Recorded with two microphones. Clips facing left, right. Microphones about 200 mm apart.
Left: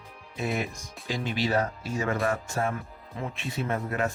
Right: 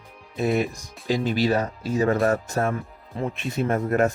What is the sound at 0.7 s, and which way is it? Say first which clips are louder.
Speech: right 8 dB; 40° right (ahead or behind).